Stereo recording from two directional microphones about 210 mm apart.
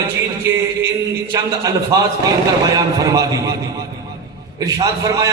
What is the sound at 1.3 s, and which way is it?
A man's voice, 15° right (ahead or behind).